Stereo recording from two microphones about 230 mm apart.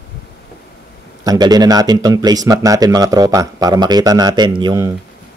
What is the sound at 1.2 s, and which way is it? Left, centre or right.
Speech, centre.